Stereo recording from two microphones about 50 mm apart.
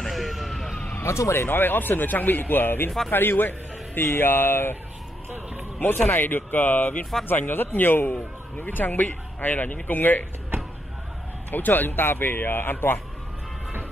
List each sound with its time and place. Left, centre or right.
0.1 s emergency vehicle: centre
1.0 s speech: left
5.8 s speech: left
11.5 s speech: left